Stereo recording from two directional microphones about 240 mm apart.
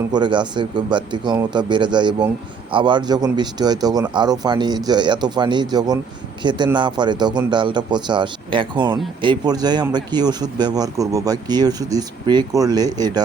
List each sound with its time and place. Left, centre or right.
0.1 s a man's voice: centre